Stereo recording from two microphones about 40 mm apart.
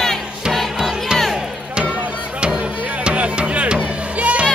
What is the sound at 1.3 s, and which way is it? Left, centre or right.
Music, right.